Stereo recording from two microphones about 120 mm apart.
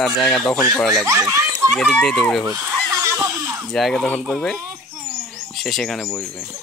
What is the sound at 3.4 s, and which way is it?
Bleat, 25° right (ahead or behind).